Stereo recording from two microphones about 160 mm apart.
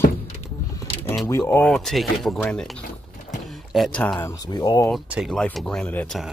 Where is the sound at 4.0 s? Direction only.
10° left (ahead or behind).